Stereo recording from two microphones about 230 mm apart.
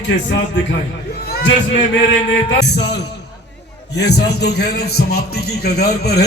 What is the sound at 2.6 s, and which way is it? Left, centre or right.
A man's voice, left.